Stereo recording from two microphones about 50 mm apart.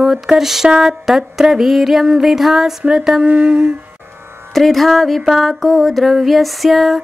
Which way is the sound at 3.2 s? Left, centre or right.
Right.